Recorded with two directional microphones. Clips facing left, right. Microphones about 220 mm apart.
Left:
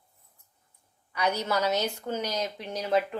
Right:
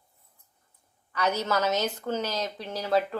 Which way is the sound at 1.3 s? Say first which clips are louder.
Right 1 dB; 10° left (ahead or behind).